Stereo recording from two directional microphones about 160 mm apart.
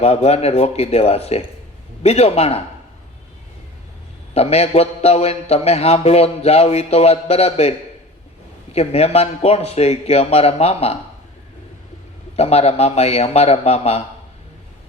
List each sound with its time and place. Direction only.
0.0 s a man's voice: 40° left (ahead or behind)
4.4 s a man's voice: 40° left (ahead or behind)
8.7 s a man's voice: 40° left (ahead or behind)
12.4 s a man's voice: 40° left (ahead or behind)